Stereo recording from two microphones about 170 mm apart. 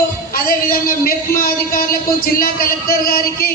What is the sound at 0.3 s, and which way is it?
A man's voice, 60° left (ahead or behind).